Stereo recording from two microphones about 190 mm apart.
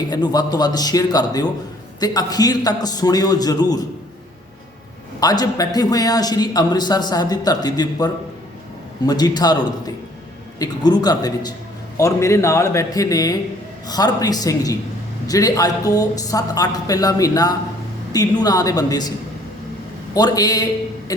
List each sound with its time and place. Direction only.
0.1 s a man's voice: 20° left (ahead or behind)
5.2 s a man's voice: 20° left (ahead or behind)
20.1 s a man's voice: 20° left (ahead or behind)